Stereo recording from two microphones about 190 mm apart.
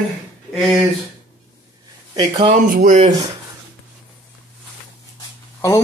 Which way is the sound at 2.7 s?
40° right (ahead or behind).